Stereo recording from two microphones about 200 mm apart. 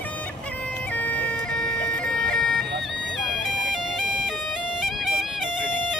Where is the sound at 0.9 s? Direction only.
10° left (ahead or behind).